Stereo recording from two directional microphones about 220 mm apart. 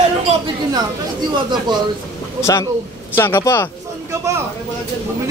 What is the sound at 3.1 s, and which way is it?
Speech, 10° left (ahead or behind).